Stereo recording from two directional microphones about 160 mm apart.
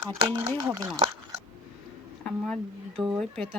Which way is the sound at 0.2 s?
20° right (ahead or behind).